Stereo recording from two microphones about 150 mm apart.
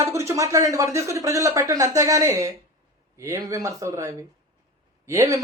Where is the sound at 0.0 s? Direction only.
20° right (ahead or behind).